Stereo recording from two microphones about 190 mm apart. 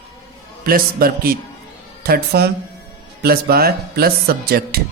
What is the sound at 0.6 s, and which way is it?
A man's voice, 50° right (ahead or behind).